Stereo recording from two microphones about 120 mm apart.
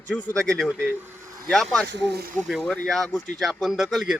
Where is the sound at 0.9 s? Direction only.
15° right (ahead or behind).